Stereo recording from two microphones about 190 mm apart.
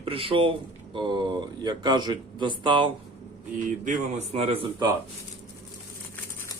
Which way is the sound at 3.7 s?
40° right (ahead or behind).